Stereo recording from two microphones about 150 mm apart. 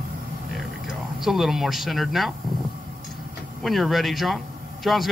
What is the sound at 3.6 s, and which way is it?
Speech, centre (ahead or behind).